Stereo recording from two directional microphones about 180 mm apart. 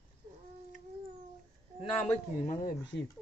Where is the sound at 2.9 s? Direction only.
70° left (ahead or behind).